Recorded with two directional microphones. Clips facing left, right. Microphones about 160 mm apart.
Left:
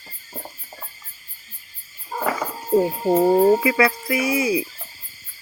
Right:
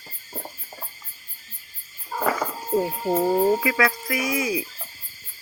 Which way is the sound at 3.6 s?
5° left (ahead or behind).